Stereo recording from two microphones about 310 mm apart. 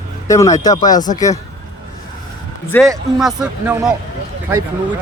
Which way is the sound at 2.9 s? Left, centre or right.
Centre.